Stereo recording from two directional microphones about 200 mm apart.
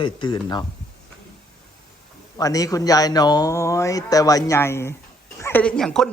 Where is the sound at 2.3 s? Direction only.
15° left (ahead or behind).